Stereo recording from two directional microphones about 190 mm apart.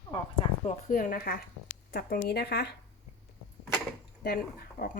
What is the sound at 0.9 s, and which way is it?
Speech, 50° left (ahead or behind).